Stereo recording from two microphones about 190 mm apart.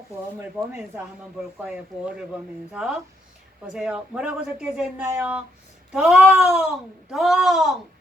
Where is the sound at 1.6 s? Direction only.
5° right (ahead or behind).